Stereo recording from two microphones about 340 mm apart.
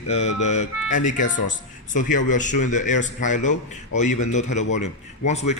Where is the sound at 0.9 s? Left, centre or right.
Left.